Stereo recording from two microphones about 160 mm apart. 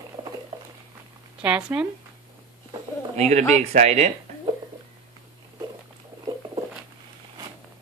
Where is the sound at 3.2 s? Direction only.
45° right (ahead or behind).